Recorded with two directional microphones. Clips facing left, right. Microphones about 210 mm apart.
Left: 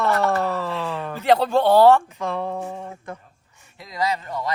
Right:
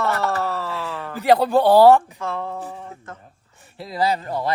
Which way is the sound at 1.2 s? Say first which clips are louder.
Right 2 dB; 10° right (ahead or behind).